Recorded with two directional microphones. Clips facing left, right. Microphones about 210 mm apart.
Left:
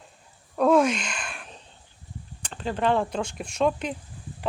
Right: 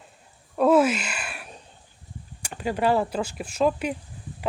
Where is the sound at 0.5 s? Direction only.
5° right (ahead or behind).